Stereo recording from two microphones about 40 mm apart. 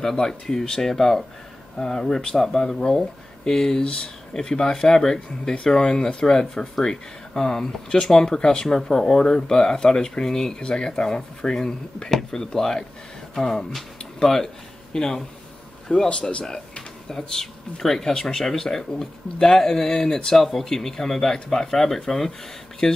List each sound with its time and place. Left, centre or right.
0.0 s speech: centre
10.6 s speech: left
16.1 s speech: left
17.1 s speech: centre
20.3 s speech: centre
22.8 s speech: left